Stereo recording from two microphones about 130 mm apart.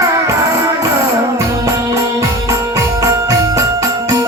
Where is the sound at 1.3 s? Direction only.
25° right (ahead or behind).